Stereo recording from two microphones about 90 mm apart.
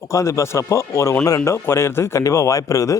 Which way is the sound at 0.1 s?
35° left (ahead or behind).